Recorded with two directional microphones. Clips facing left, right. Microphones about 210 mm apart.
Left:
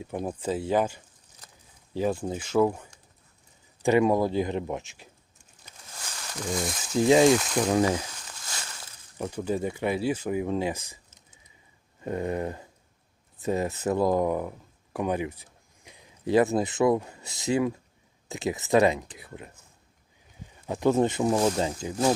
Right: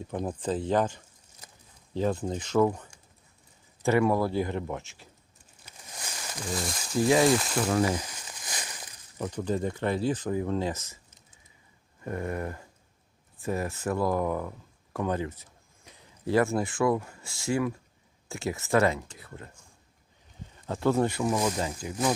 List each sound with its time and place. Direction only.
0.0 s speech: 10° left (ahead or behind)
5.6 s a sound: 15° right (ahead or behind)
6.5 s speech: centre (ahead or behind)
8.3 s a sound: 15° right (ahead or behind)
9.1 s speech: 10° left (ahead or behind)
12.0 s speech: 20° left (ahead or behind)
20.7 s speech: 15° left (ahead or behind)